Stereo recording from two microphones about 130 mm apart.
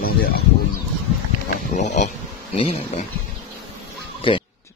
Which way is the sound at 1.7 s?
65° left (ahead or behind).